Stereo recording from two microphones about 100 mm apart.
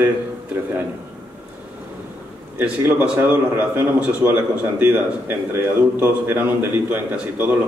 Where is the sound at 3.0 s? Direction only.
15° right (ahead or behind).